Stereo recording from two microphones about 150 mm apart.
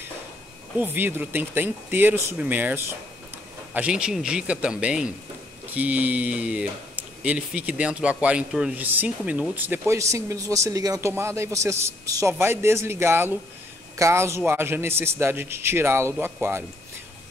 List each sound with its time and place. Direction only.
0.7 s a man's voice: 15° right (ahead or behind)